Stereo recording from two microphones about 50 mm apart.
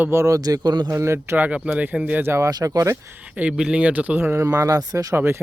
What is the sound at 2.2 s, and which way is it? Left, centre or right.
Speech, right.